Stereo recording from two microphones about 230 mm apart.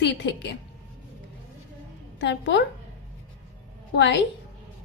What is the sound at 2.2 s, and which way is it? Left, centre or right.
Speech, left.